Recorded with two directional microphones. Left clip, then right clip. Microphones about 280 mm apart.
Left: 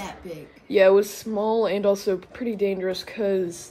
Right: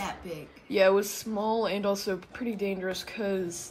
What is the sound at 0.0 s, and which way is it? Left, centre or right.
A woman's voice, centre.